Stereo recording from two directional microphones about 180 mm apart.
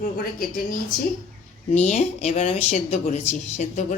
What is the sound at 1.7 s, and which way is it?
A woman's voice, 40° left (ahead or behind).